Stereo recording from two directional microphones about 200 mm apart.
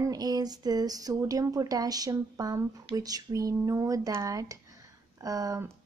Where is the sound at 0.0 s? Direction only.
20° right (ahead or behind).